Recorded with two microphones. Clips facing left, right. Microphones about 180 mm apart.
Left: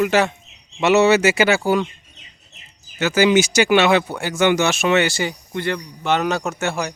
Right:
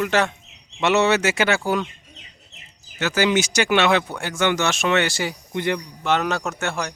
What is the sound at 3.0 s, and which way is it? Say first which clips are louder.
Speech: left 5 dB; 5° left (ahead or behind).